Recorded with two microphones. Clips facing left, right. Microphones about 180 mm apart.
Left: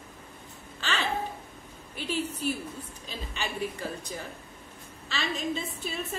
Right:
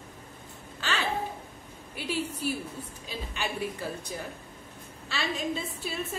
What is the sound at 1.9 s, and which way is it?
Speech, 10° right (ahead or behind).